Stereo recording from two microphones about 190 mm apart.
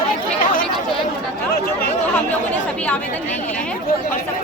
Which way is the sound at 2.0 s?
5° left (ahead or behind).